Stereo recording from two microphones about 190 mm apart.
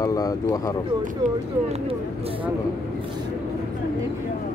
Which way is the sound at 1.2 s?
40° right (ahead or behind).